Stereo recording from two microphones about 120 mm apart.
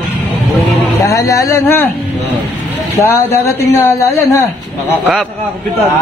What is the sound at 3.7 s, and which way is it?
Speech, 25° left (ahead or behind).